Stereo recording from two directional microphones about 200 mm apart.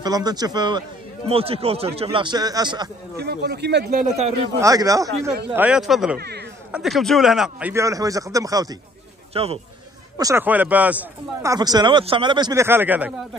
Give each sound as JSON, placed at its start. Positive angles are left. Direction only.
{"t": 0.0, "sound": "a man's voice", "side_deg": -20}
{"t": 3.2, "sound": "a man's voice", "side_deg": -55}
{"t": 4.6, "sound": "speech", "side_deg": -15}
{"t": 6.1, "sound": "a man's voice", "side_deg": -55}
{"t": 6.7, "sound": "speech", "side_deg": 0}
{"t": 9.3, "sound": "a man's voice", "side_deg": -30}
{"t": 10.1, "sound": "speech", "side_deg": -15}
{"t": 11.5, "sound": "a man's voice", "side_deg": -20}